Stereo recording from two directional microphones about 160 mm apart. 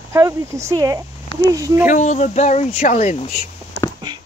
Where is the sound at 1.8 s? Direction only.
50° left (ahead or behind).